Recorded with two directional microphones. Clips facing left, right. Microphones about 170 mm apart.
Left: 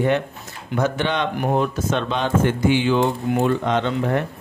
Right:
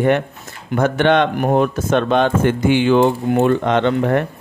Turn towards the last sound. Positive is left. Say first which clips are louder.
# right 5 dB
turn(degrees=-60)  # may be behind; listen again after turning